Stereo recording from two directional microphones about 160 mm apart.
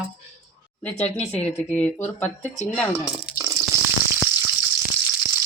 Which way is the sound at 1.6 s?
10° left (ahead or behind).